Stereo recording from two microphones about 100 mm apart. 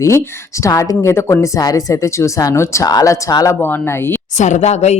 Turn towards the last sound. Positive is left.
turn(degrees=90)